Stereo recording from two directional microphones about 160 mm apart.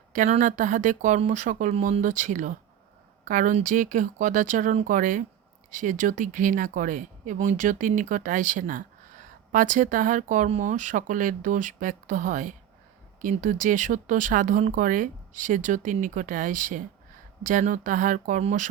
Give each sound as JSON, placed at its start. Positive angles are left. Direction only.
{"t": 0.1, "sound": "speech", "side_deg": -50}